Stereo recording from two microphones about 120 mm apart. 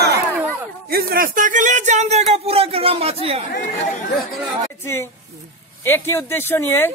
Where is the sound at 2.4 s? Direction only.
55° right (ahead or behind).